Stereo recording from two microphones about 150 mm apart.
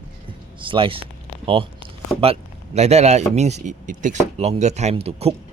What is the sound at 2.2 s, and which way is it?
Speech, 45° right (ahead or behind).